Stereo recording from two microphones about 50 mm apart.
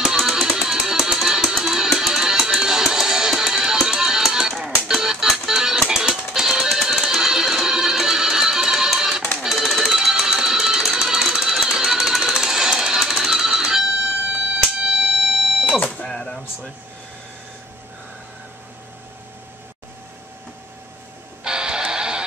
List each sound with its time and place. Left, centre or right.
0.0 s music: centre
4.6 s music: centre
4.8 s music: centre
14.5 s a sound: right
15.8 s a sound: centre
21.5 s music: centre